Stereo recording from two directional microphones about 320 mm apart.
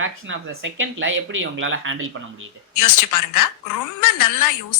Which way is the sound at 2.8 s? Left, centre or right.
Left.